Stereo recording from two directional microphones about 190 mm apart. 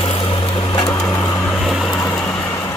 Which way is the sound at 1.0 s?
5° left (ahead or behind).